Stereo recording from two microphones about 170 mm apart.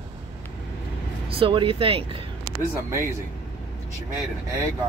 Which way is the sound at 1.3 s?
30° right (ahead or behind).